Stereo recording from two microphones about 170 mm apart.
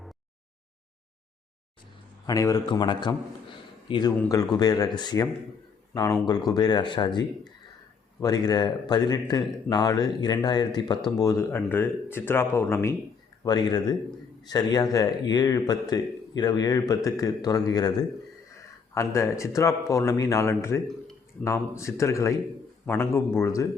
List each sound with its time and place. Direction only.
2.2 s a man's voice: 20° left (ahead or behind)